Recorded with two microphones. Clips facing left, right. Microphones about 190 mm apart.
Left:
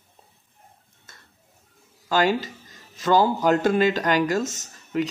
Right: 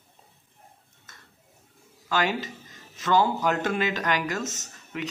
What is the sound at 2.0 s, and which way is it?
Speech, 35° left (ahead or behind).